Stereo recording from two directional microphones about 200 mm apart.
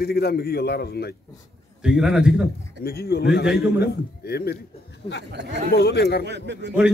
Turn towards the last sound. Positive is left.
turn(degrees=-60)  # may be behind; listen again after turning